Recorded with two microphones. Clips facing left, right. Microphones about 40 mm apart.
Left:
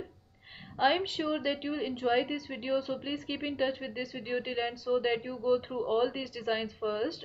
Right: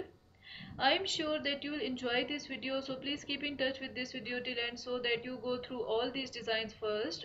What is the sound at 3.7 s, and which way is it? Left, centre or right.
Speech, centre.